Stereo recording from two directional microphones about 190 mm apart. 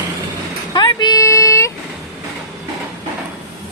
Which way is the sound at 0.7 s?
20° left (ahead or behind).